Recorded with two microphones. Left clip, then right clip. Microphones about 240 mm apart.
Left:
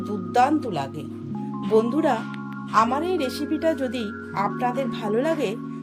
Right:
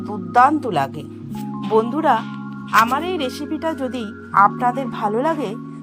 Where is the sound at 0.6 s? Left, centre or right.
Centre.